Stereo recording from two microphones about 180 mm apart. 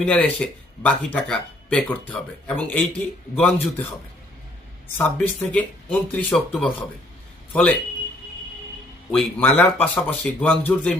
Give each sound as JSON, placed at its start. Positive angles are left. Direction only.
{"t": 0.0, "sound": "speech", "side_deg": 5}
{"t": 4.9, "sound": "speech", "side_deg": 10}
{"t": 9.1, "sound": "speech", "side_deg": 10}